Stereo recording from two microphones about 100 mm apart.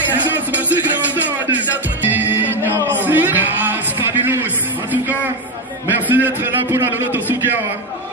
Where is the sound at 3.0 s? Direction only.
20° right (ahead or behind).